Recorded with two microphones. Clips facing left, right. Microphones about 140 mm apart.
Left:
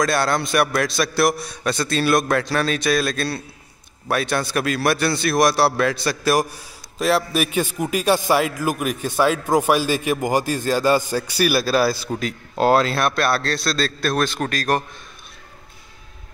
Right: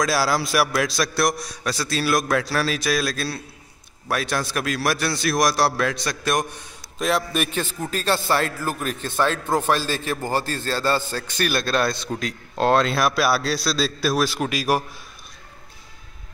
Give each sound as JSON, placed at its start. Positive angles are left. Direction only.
{"t": 0.0, "sound": "a man's voice", "side_deg": 0}